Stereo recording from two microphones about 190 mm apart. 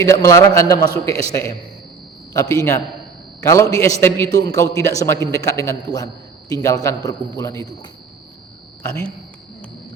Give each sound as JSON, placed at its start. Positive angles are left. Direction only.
{"t": 0.0, "sound": "a man's voice", "side_deg": 15}